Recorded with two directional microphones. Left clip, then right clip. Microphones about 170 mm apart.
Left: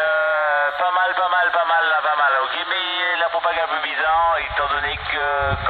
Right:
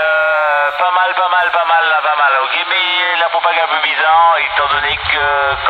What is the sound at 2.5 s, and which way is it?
Music, 90° right.